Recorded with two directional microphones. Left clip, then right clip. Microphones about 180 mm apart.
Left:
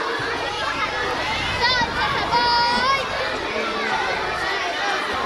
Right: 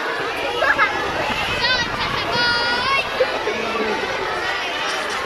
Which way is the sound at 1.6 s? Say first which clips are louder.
Left 3 dB; 35° left (ahead or behind).